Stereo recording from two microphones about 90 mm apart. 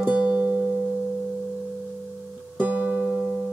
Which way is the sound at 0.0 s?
15° right (ahead or behind).